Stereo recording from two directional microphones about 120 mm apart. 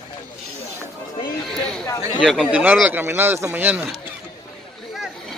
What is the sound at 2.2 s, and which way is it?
Speech, 5° left (ahead or behind).